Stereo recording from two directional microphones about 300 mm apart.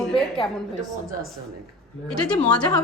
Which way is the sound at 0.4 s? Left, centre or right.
Centre.